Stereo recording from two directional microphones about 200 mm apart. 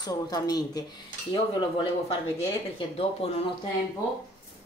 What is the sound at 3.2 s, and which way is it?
Speech, 30° left (ahead or behind).